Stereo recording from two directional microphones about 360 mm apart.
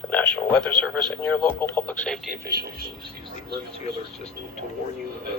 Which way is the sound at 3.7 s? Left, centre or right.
Centre.